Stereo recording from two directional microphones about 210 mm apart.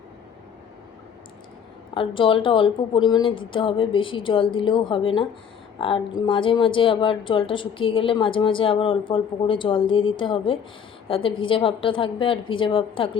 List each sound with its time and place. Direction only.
1.9 s a woman's voice: 25° left (ahead or behind)